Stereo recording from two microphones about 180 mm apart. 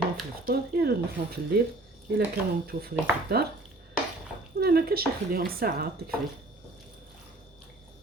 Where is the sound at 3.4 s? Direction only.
60° right (ahead or behind).